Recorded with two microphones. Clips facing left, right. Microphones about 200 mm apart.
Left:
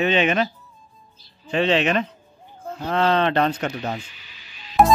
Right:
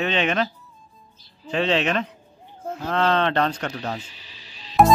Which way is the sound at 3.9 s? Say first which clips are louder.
Left 1 dB; 35° right (ahead or behind).